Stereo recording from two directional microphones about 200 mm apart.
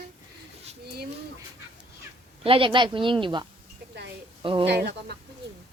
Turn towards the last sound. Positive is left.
turn(degrees=-55)  # may be behind; listen again after turning